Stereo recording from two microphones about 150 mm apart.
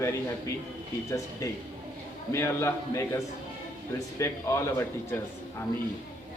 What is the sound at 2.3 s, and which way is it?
Speech, 15° left (ahead or behind).